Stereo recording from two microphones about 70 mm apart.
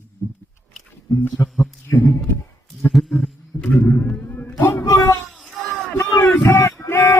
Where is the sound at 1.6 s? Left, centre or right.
Left.